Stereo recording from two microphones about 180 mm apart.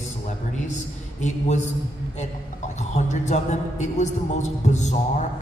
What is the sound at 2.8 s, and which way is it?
A man's voice, 40° left (ahead or behind).